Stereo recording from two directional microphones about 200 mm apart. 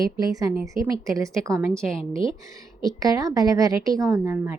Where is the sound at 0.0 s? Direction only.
20° right (ahead or behind).